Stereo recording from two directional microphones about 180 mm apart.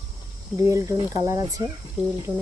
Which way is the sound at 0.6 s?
15° right (ahead or behind).